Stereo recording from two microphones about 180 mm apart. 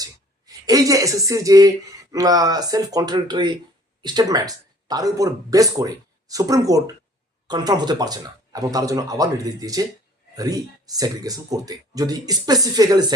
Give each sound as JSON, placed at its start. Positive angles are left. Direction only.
{"t": 0.0, "sound": "speech", "side_deg": -20}